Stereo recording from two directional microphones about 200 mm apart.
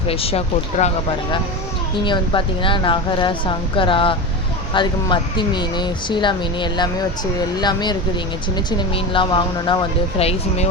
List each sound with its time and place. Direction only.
0.1 s speech: 30° left (ahead or behind)
2.0 s speech: 25° left (ahead or behind)